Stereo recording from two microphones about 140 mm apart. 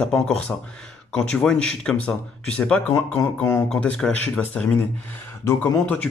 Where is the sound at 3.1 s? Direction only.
20° left (ahead or behind).